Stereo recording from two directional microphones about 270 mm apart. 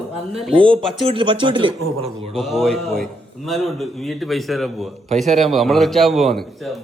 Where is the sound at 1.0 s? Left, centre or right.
Centre.